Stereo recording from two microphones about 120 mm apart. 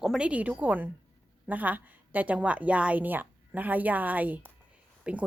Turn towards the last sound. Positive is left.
turn(degrees=-10)  # may be behind; listen again after turning